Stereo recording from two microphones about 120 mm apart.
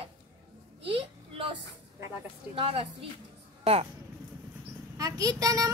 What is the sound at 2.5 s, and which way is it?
Speech, 50° right (ahead or behind).